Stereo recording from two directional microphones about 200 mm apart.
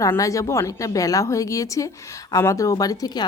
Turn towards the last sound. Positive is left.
turn(degrees=20)  # may be behind; listen again after turning